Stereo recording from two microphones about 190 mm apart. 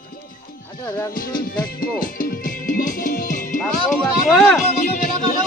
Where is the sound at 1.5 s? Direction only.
45° left (ahead or behind).